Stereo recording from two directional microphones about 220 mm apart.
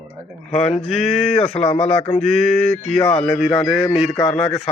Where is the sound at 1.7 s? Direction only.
25° left (ahead or behind).